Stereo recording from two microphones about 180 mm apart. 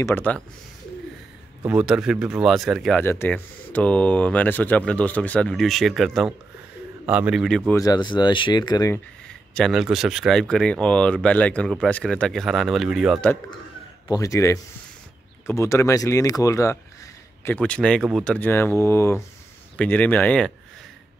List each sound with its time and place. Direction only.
0.0 s speech: 10° left (ahead or behind)
1.7 s speech: 5° right (ahead or behind)
3.0 s speech: 10° left (ahead or behind)
7.7 s speech: 20° left (ahead or behind)
9.5 s speech: centre (ahead or behind)
14.0 s speech: 20° left (ahead or behind)
17.5 s speech: 5° left (ahead or behind)